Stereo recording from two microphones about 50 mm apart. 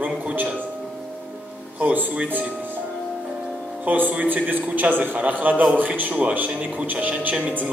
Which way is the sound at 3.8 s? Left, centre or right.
Right.